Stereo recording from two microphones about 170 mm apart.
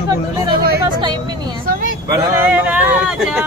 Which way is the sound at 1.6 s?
60° right (ahead or behind).